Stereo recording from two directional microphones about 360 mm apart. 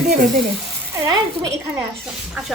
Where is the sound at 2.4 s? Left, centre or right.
Centre.